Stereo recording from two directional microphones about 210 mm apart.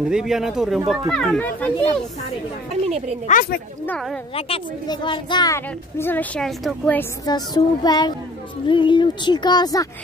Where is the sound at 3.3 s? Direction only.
45° left (ahead or behind).